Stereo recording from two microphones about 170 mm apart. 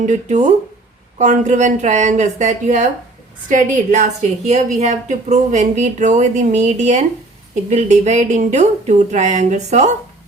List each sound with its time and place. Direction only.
0.0 s a woman's voice: 45° right (ahead or behind)